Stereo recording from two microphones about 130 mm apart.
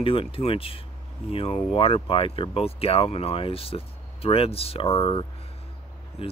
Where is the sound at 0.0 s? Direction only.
45° left (ahead or behind).